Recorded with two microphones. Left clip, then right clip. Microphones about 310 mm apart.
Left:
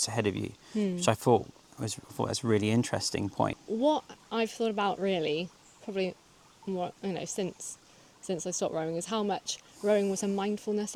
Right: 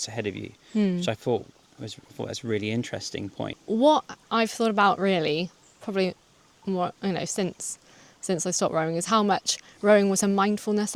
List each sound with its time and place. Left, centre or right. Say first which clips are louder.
0.0 s speech: left 1 dB; centre
3.8 s speech: right 8 dB; right